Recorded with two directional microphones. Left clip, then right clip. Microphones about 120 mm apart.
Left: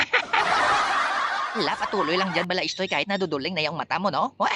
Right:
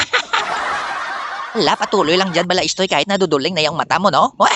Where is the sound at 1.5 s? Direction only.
70° right (ahead or behind).